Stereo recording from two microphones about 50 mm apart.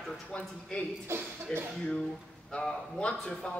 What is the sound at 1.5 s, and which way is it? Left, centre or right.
A man's voice, centre.